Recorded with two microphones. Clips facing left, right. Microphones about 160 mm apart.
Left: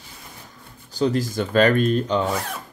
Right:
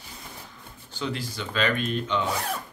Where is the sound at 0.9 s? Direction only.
40° left (ahead or behind).